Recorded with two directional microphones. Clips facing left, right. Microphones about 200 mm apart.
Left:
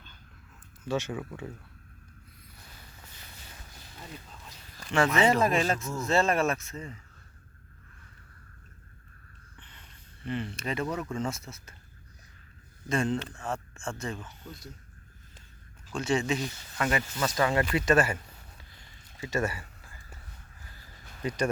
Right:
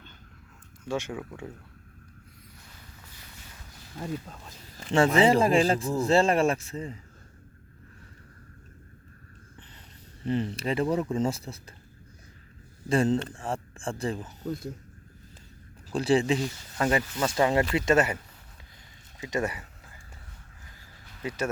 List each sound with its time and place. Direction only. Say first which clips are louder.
0.9 s speech: even; 10° right (ahead or behind)
1.2 s speech: even; centre (ahead or behind)
4.8 s speech: right 4 dB; 30° right (ahead or behind)
10.2 s speech: right 5 dB; 35° right (ahead or behind)
12.9 s speech: right 5 dB; 35° right (ahead or behind)
15.9 s speech: right 5 dB; 35° right (ahead or behind)
19.2 s a sound: right 1 dB; 20° right (ahead or behind)
20.7 s a sound: left 3 dB; 5° right (ahead or behind)